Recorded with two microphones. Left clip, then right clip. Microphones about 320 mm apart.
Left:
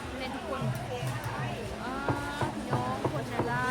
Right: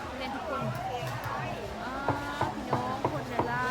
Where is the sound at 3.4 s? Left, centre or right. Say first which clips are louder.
Right 2 dB; right.